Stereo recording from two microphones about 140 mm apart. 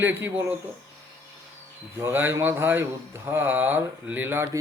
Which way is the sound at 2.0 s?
15° right (ahead or behind).